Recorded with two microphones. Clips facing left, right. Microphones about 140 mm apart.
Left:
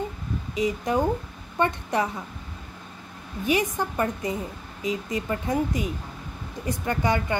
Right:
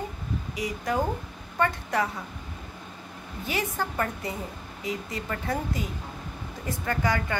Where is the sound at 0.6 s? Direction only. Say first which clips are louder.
Left 4 dB; 20° left (ahead or behind).